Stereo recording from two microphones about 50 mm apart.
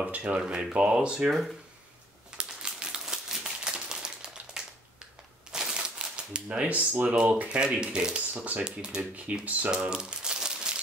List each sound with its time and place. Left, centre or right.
0.2 s speech: right
2.3 s typewriter: centre
5.5 s a sound: centre
6.5 s speech: right
9.1 s speech: right
9.8 s crumpling: centre